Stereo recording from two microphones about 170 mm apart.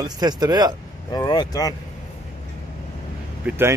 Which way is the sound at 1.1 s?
25° left (ahead or behind).